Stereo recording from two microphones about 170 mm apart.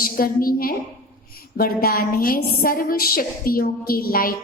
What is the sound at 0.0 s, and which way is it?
A woman's voice, 55° left (ahead or behind).